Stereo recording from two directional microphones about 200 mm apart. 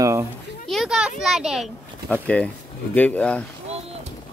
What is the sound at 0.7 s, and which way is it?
A child's voice, centre (ahead or behind).